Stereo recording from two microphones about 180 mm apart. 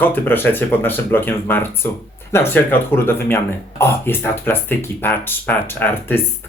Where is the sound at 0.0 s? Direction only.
10° left (ahead or behind).